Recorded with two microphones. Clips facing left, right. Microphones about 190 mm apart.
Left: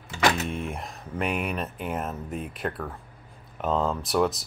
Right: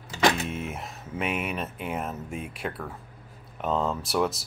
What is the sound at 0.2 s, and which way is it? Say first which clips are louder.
Speech: even; centre (ahead or behind).